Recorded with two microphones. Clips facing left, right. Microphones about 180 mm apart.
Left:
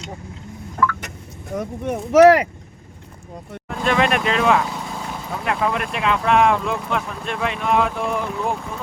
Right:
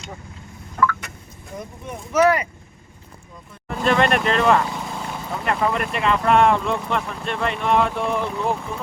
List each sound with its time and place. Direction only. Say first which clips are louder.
1.5 s speech: left 9 dB; 70° left (ahead or behind); by 2.5 s 85° left
3.7 s speech: right 1 dB; centre (ahead or behind)